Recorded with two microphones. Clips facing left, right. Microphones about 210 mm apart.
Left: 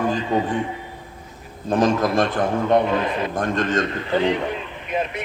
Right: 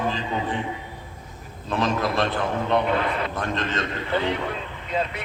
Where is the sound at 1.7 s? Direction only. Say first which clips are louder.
Left 6 dB; 45° left (ahead or behind).